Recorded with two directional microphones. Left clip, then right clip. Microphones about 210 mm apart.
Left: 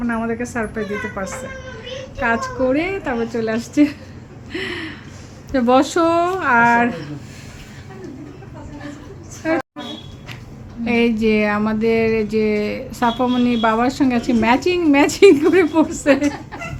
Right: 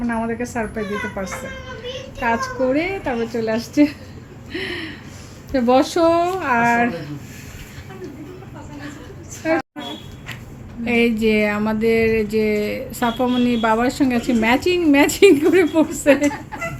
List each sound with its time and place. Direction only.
0.1 s speech: 5° right (ahead or behind)
4.5 s a sound: centre (ahead or behind)
5.5 s speech: centre (ahead or behind)
9.4 s speech: centre (ahead or behind)
10.8 s speech: centre (ahead or behind)